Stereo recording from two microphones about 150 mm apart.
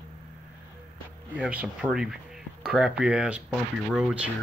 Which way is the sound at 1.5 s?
10° right (ahead or behind).